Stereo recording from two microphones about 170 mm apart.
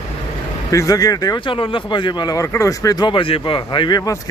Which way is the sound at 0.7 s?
20° left (ahead or behind).